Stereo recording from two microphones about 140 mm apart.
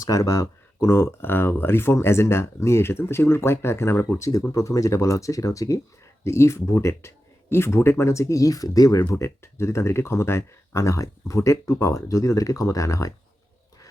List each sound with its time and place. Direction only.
0.0 s speech: 25° left (ahead or behind)